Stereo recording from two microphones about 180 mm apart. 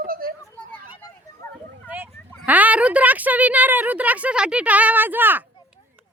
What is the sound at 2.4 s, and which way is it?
Speech, 10° right (ahead or behind).